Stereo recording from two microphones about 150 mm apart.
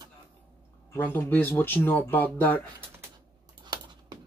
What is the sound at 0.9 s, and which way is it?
Speech, 15° left (ahead or behind).